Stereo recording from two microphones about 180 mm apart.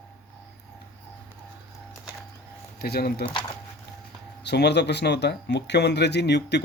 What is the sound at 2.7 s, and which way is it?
Speech, 60° left (ahead or behind).